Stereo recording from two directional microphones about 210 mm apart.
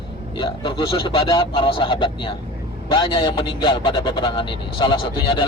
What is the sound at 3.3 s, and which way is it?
Speech, 25° left (ahead or behind).